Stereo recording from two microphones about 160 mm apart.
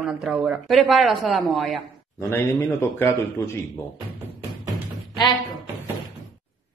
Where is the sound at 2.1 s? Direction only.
15° left (ahead or behind).